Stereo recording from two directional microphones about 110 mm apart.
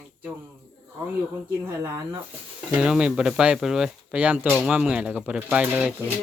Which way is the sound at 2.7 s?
10° right (ahead or behind).